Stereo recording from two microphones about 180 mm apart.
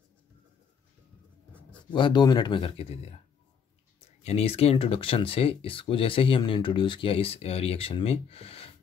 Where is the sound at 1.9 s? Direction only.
25° left (ahead or behind).